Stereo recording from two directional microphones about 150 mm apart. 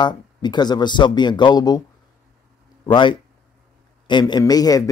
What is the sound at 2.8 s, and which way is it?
A man's voice, 30° left (ahead or behind).